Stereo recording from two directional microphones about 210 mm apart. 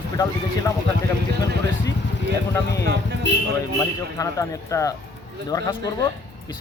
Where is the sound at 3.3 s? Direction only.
60° left (ahead or behind).